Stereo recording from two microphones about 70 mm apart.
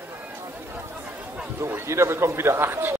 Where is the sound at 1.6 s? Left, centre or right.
Right.